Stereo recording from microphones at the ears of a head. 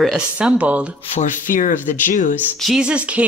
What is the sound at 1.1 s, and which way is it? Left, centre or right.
Speech, left.